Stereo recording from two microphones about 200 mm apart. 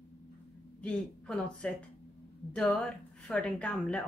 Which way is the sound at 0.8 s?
5° left (ahead or behind).